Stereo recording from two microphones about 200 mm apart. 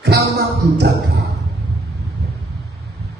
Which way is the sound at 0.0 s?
60° right (ahead or behind).